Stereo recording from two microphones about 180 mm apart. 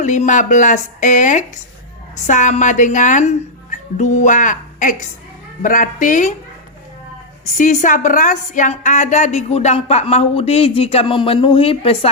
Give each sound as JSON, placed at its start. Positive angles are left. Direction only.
{"t": 0.0, "sound": "speech", "side_deg": 40}
{"t": 7.5, "sound": "a woman's voice", "side_deg": 40}